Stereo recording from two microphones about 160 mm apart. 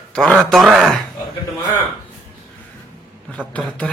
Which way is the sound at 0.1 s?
5° left (ahead or behind).